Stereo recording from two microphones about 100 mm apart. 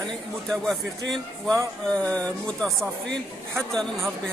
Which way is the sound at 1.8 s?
10° left (ahead or behind).